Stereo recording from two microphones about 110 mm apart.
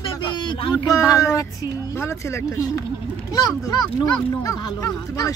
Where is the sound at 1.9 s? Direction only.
25° left (ahead or behind).